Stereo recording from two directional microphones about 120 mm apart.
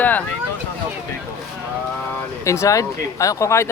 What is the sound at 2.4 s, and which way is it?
Speech, 25° left (ahead or behind).